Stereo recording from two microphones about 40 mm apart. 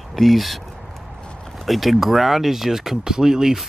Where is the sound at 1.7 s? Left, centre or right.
Centre.